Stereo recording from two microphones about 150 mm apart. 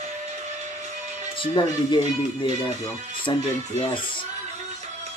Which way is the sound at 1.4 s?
30° left (ahead or behind).